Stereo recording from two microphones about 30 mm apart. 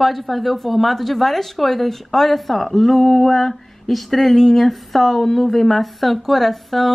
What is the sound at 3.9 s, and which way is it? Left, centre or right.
Speech, centre.